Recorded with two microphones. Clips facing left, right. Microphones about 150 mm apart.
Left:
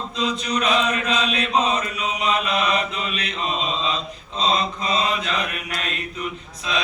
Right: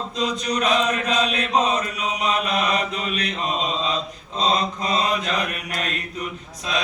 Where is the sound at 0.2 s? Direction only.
45° right (ahead or behind).